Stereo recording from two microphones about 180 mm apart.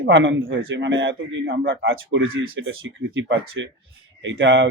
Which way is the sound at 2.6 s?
90° right.